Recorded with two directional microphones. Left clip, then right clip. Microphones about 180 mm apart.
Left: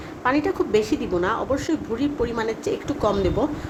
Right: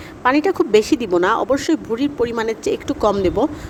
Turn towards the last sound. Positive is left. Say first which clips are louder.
# right 5 dB
turn(degrees=-50)  # may be behind; listen again after turning